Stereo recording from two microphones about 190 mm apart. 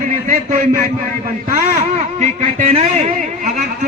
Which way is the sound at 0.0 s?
45° right (ahead or behind).